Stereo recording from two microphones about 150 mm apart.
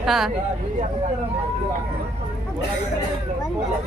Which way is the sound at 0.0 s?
Centre (ahead or behind).